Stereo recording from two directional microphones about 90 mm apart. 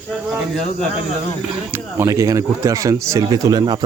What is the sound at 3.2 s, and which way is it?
Speech, 45° right (ahead or behind).